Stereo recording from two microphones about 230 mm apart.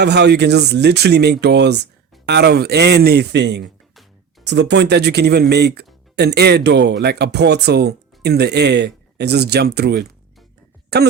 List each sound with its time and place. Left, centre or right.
0.0 s speech: right